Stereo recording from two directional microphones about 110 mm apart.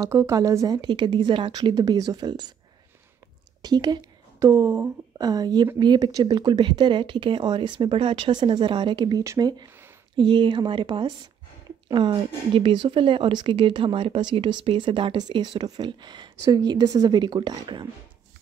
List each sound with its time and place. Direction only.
0.0 s speech: 25° right (ahead or behind)
0.7 s speech: 45° right (ahead or behind)
3.6 s a woman's voice: 40° right (ahead or behind)
9.2 s speech: 30° right (ahead or behind)
10.1 s speech: 45° right (ahead or behind)